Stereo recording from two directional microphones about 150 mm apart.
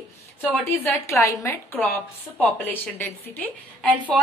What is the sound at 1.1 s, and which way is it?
A woman's voice, 20° left (ahead or behind).